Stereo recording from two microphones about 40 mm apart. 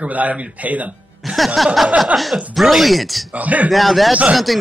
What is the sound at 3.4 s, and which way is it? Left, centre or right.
Speech, right.